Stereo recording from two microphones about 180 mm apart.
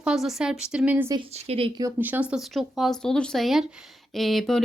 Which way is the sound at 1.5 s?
30° right (ahead or behind).